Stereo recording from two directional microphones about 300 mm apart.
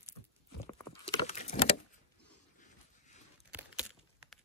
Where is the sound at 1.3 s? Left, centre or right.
Left.